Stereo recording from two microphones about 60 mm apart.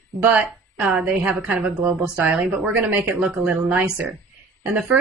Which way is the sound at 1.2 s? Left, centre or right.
Centre.